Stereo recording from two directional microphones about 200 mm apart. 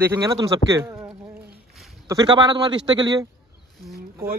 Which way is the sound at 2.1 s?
20° right (ahead or behind).